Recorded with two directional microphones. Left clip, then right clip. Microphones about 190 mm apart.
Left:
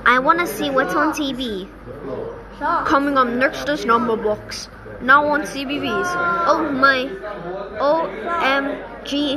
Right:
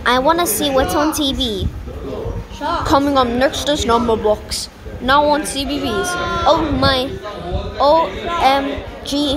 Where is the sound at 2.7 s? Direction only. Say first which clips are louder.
Right 2 dB; 5° right (ahead or behind).